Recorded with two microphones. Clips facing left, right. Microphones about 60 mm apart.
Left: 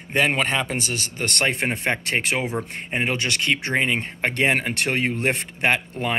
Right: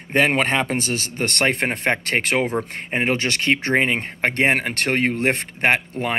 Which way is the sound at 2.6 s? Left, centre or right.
Right.